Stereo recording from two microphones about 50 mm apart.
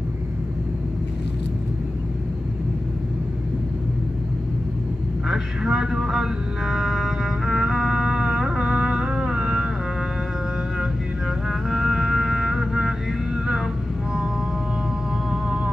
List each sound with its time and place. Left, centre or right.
5.3 s music: centre
7.6 s music: centre
10.8 s music: centre
15.4 s music: centre